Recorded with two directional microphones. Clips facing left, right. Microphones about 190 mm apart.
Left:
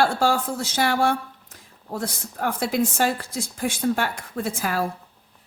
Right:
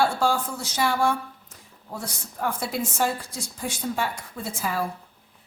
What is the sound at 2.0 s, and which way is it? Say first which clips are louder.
A woman's voice: left 4 dB; 75° left (ahead or behind).